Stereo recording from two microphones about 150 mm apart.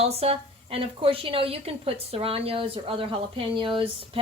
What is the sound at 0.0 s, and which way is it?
A woman's voice, 40° right (ahead or behind).